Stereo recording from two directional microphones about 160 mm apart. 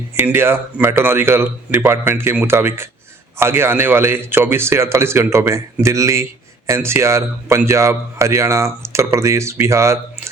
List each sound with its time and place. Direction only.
0.2 s a man's voice: 15° right (ahead or behind)